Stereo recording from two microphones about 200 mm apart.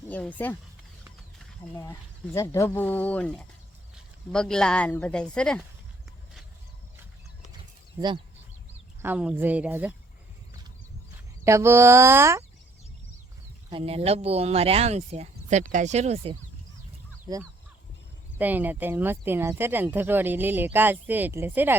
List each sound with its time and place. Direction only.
0.1 s speech: 10° left (ahead or behind)
1.7 s speech: 15° left (ahead or behind)
9.0 s speech: 10° right (ahead or behind)
11.4 s speech: 15° right (ahead or behind)
13.7 s speech: 30° right (ahead or behind)
17.3 s speech: 20° right (ahead or behind)
18.3 s speech: 10° right (ahead or behind)